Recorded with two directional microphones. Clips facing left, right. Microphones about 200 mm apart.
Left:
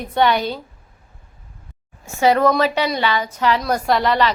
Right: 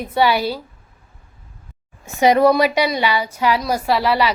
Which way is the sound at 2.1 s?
15° right (ahead or behind).